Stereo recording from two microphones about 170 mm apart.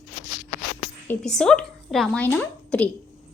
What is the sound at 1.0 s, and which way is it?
A woman's voice, 10° left (ahead or behind).